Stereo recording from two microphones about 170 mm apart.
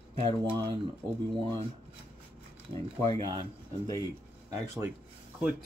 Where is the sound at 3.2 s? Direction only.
30° right (ahead or behind).